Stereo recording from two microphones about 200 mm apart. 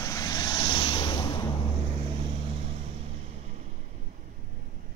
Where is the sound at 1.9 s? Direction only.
30° right (ahead or behind).